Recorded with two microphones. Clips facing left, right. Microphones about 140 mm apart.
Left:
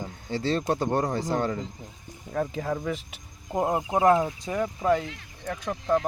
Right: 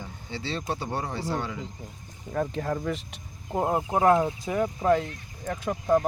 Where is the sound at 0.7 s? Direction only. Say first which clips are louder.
Left 4 dB; 45° left (ahead or behind).